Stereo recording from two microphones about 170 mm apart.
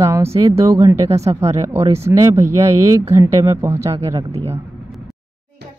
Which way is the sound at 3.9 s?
35° right (ahead or behind).